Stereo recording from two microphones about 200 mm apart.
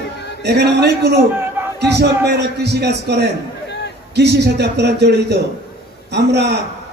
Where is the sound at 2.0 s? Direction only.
55° right (ahead or behind).